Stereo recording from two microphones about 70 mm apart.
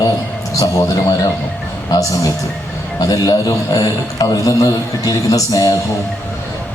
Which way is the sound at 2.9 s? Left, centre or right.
Left.